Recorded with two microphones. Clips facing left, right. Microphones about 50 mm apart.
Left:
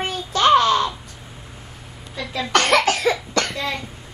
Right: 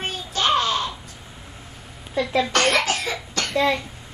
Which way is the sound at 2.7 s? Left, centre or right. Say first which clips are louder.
Left 5 dB; left.